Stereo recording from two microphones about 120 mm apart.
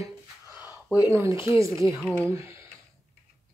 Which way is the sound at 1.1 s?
25° right (ahead or behind).